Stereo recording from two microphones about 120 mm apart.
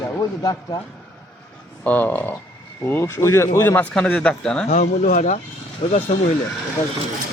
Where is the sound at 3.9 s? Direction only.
10° left (ahead or behind).